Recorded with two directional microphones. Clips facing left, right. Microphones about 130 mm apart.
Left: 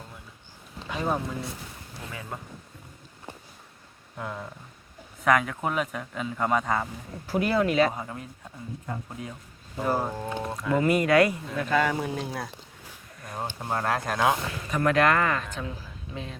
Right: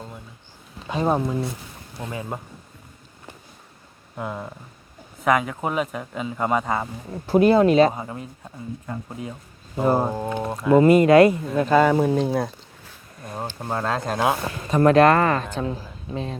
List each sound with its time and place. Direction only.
0.9 s speech: 30° right (ahead or behind)
4.2 s a man's voice: 20° right (ahead or behind)
7.3 s speech: 25° right (ahead or behind)
7.9 s a man's voice: 15° right (ahead or behind)
9.7 s speech: 25° right (ahead or behind)
14.4 s speech: 30° right (ahead or behind)